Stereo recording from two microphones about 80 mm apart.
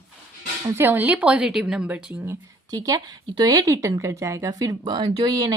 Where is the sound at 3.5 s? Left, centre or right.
Right.